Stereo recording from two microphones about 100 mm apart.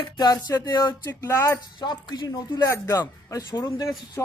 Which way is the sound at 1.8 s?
45° left (ahead or behind).